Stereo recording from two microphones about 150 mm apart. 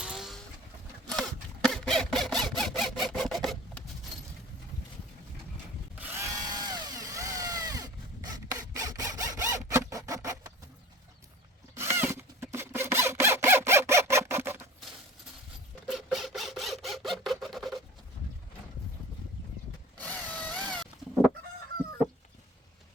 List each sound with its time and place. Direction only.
0.0 s vehicle: 5° right (ahead or behind)
1.6 s a sound: centre (ahead or behind)
6.0 s power tool: 15° right (ahead or behind)
9.6 s zipper: 20° right (ahead or behind)
11.8 s zipper: 15° right (ahead or behind)
15.9 s a sound: centre (ahead or behind)
20.0 s tools: 10° left (ahead or behind)